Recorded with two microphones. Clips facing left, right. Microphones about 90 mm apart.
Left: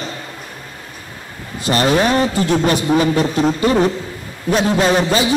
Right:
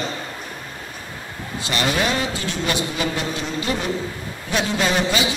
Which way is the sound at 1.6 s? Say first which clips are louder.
Left 7 dB; 40° left (ahead or behind).